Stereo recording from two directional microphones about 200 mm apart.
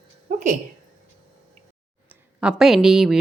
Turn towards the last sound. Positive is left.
turn(degrees=0)  # may be behind; listen again after turning